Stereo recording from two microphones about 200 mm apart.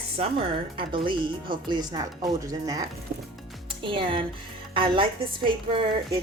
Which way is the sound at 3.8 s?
25° right (ahead or behind).